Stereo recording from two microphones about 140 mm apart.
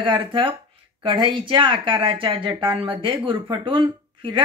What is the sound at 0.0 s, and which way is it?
Speech, 35° right (ahead or behind).